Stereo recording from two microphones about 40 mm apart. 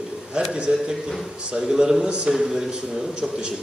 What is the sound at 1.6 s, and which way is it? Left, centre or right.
A man's voice, centre.